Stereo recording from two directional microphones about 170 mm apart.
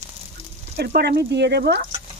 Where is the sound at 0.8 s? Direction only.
70° right (ahead or behind).